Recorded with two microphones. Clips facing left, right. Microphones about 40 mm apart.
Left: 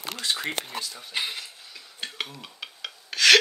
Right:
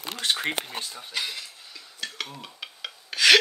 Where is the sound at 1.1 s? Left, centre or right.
Left.